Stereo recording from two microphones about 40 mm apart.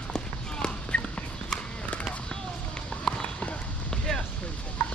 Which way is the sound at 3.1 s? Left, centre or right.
Centre.